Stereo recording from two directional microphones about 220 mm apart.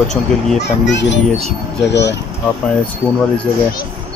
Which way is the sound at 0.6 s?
50° left (ahead or behind).